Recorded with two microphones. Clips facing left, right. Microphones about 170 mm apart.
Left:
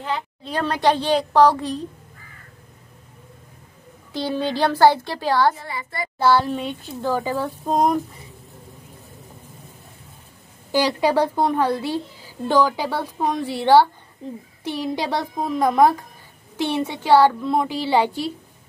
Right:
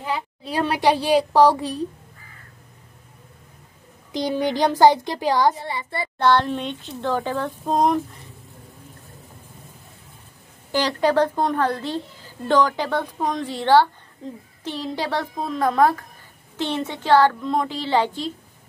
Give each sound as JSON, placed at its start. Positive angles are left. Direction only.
{"t": 0.0, "sound": "speech", "side_deg": -10}
{"t": 4.1, "sound": "speech", "side_deg": -15}
{"t": 5.7, "sound": "child singing", "side_deg": -30}
{"t": 6.1, "sound": "speech", "side_deg": 5}
{"t": 10.7, "sound": "a woman's voice", "side_deg": 10}